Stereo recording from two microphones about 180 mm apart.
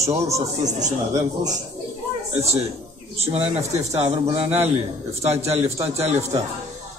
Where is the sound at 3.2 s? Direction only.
35° right (ahead or behind).